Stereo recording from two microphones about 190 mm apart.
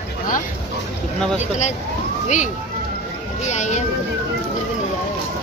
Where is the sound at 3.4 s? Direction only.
40° left (ahead or behind).